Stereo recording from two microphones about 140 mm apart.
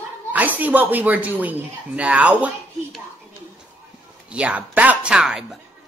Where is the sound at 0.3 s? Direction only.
10° right (ahead or behind).